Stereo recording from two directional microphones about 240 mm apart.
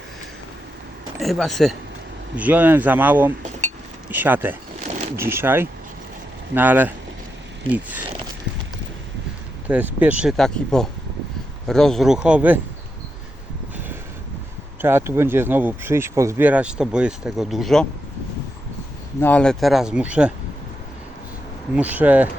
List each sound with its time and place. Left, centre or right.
1.2 s speech: centre
9.6 s speech: centre
14.8 s speech: centre
19.2 s speech: centre
21.8 s speech: centre